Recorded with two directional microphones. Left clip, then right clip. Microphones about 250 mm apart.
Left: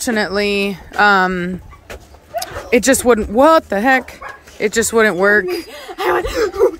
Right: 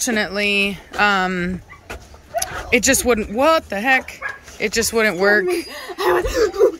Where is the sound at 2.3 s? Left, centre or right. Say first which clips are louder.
Even; left.